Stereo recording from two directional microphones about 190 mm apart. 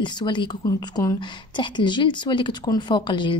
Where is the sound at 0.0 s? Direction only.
25° left (ahead or behind).